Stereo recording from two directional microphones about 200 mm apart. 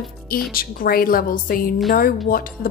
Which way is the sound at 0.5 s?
45° left (ahead or behind).